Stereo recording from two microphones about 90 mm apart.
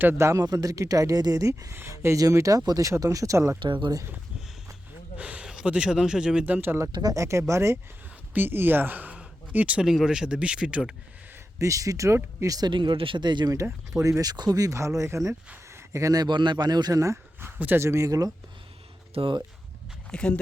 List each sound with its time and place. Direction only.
0.0 s speech: 20° right (ahead or behind)
0.3 s speech: 45° right (ahead or behind)
1.7 s speech: 25° right (ahead or behind)
3.6 s speech: 60° right (ahead or behind)
5.1 s speech: 15° right (ahead or behind)
6.9 s speech: 45° right (ahead or behind); by 10.9 s 10° right (ahead or behind)
11.6 s speech: 40° right (ahead or behind)
12.7 s speech: 60° right (ahead or behind)
13.9 s speech: 35° right (ahead or behind)
19.1 s speech: 75° right (ahead or behind)
20.1 s speech: 10° left (ahead or behind)